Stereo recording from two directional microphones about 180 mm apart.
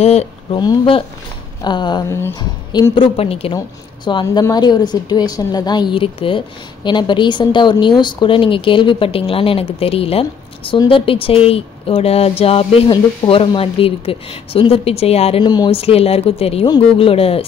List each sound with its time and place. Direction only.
0.0 s speech: 35° left (ahead or behind)
2.1 s speech: 15° left (ahead or behind)
2.9 s speech: 30° left (ahead or behind)
15.4 s speech: 25° left (ahead or behind)